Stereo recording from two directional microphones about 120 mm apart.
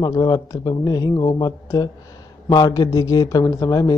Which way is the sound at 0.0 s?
35° left (ahead or behind).